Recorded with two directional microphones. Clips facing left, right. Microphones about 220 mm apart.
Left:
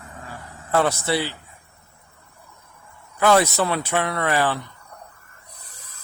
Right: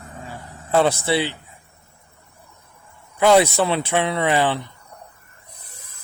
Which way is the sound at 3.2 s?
20° right (ahead or behind).